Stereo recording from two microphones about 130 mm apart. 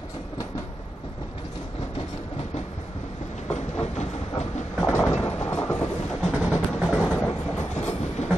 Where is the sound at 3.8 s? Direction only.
60° left (ahead or behind).